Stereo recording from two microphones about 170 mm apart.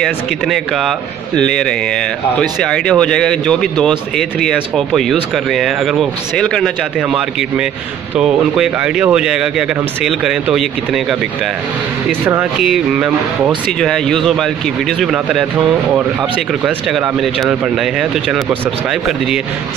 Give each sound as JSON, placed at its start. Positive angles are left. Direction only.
{"t": 0.0, "sound": "speech", "side_deg": 0}
{"t": 16.6, "sound": "speech", "side_deg": 0}